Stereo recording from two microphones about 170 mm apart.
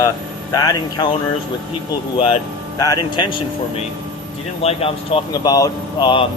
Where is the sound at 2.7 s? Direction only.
20° left (ahead or behind).